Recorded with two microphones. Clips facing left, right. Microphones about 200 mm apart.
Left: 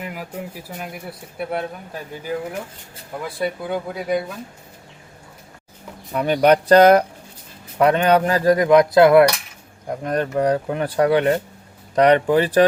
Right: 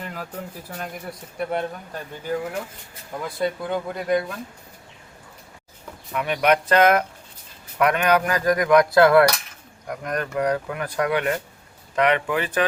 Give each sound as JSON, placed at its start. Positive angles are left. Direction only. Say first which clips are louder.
{"t": 0.0, "sound": "speech", "louder": "left 3 dB", "side_deg": 10}
{"t": 6.1, "sound": "speech", "louder": "left 5 dB", "side_deg": 35}
{"t": 7.8, "sound": "cap gun", "louder": "left 4 dB", "side_deg": 30}
{"t": 11.9, "sound": "speech", "louder": "left 7 dB", "side_deg": 35}